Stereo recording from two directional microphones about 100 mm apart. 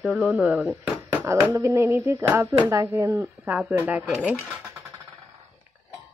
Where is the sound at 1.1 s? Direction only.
20° right (ahead or behind).